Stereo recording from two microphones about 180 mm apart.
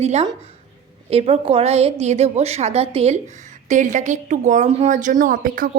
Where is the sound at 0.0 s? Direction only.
35° right (ahead or behind).